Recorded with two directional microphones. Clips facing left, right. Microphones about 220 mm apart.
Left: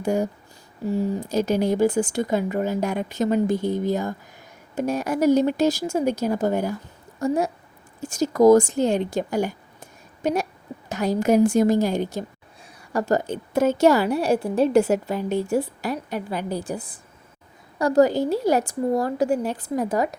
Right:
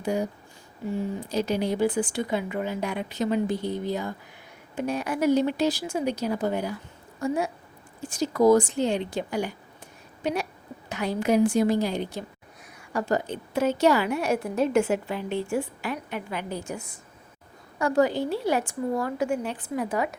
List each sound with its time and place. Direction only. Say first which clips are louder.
0.0 s a woman's voice: left 4 dB; 45° left (ahead or behind)